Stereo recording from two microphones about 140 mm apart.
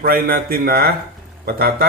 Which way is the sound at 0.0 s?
90° right.